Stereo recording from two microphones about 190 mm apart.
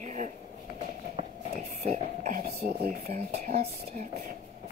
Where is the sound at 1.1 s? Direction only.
35° right (ahead or behind).